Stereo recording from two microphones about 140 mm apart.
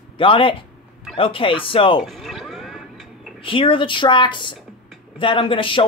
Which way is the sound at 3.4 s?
40° left (ahead or behind).